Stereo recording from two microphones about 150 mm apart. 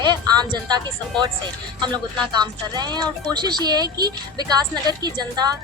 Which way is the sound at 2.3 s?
30° right (ahead or behind).